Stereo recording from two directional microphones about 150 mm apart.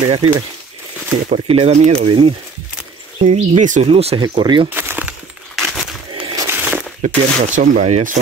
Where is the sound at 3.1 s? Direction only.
55° right (ahead or behind).